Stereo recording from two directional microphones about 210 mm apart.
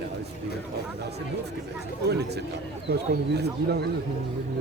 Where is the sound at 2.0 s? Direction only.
50° right (ahead or behind).